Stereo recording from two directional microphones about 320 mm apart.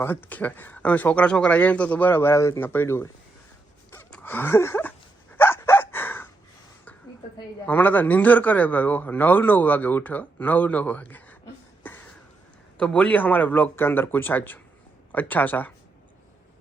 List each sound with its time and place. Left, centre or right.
0.0 s a man's voice: centre
3.9 s dog: centre
7.3 s a man's voice: centre
11.8 s a sound: centre
12.8 s a man's voice: centre